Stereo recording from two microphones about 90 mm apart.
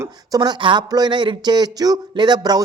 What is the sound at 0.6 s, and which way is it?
Speech, 65° right (ahead or behind).